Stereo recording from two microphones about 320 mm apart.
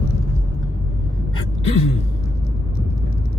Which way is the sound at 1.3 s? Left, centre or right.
Centre.